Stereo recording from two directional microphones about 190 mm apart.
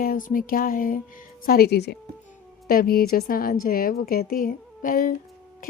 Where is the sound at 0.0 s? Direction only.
45° left (ahead or behind).